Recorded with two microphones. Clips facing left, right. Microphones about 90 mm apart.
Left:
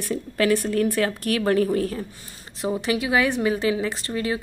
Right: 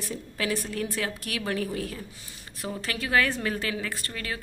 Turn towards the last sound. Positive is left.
turn(degrees=25)  # may be behind; listen again after turning